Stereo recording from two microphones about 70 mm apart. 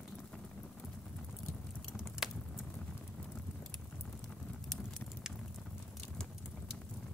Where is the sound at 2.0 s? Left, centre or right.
Centre.